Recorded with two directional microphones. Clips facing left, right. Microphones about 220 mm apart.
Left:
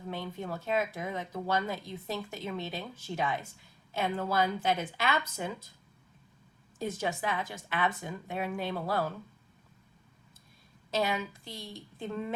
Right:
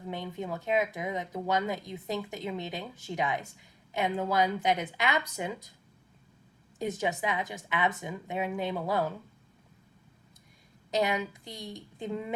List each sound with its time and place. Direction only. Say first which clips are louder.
0.1 s speech: right 2 dB; 20° right (ahead or behind)
6.7 s a woman's voice: right 2 dB; 20° right (ahead or behind)
10.9 s speech: right 2 dB; 20° right (ahead or behind)